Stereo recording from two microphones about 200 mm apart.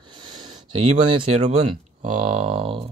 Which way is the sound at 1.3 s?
35° right (ahead or behind).